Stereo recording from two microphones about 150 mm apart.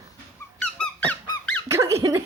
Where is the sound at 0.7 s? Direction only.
5° left (ahead or behind).